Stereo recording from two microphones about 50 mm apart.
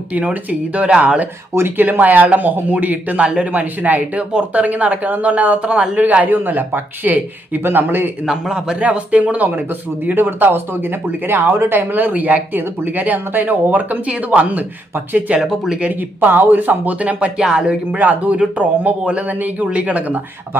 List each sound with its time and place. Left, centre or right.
0.1 s speech: right
7.6 s a man's voice: right
8.3 s a man's voice: centre
8.7 s speech: right
15.4 s a man's voice: centre
15.8 s speech: right
17.4 s a man's voice: centre
17.6 s speech: right